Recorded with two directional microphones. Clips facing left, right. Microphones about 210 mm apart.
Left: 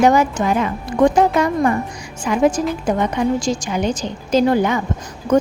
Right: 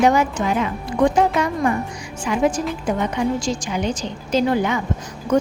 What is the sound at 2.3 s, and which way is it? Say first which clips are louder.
A woman's voice: left 3 dB; 45° left (ahead or behind).